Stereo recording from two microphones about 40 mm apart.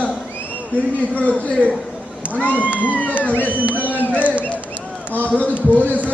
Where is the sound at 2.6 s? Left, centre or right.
Right.